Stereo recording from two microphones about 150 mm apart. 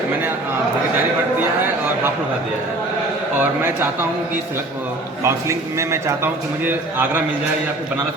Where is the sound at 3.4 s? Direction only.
15° right (ahead or behind).